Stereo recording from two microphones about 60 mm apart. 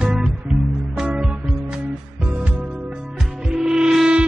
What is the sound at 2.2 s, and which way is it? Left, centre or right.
Music, right.